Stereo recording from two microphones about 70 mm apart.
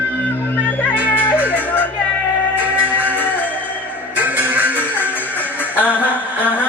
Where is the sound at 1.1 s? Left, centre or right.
Left.